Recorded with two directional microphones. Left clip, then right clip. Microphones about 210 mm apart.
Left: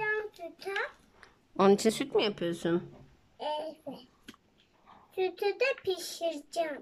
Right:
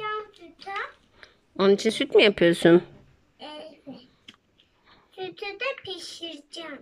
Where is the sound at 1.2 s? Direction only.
Centre (ahead or behind).